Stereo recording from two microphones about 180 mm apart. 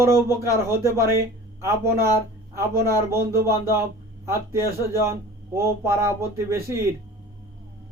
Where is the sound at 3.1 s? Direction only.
15° right (ahead or behind).